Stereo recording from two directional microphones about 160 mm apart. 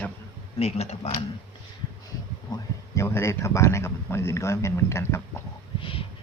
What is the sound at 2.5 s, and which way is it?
Speech, 25° left (ahead or behind).